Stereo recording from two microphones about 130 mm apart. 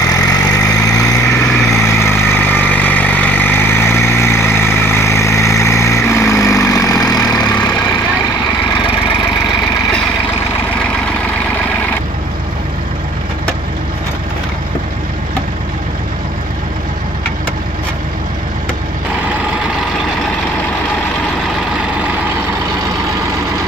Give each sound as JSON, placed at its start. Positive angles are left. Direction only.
{"t": 0.0, "sound": "vehicle", "side_deg": 30}